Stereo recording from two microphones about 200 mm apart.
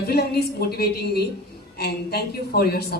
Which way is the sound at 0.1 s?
55° left (ahead or behind).